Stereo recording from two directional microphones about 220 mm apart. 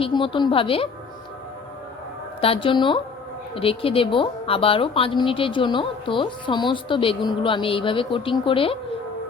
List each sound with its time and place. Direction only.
0.0 s a woman's voice: 20° left (ahead or behind)
2.4 s a woman's voice: 25° left (ahead or behind)